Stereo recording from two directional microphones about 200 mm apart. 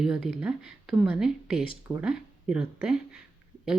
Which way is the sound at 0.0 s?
Centre (ahead or behind).